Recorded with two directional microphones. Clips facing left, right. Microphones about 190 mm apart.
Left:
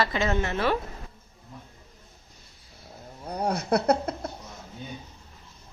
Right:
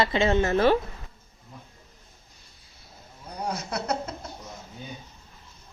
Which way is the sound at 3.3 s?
60° left (ahead or behind).